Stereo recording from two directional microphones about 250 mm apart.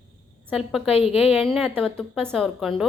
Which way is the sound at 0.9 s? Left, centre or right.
Left.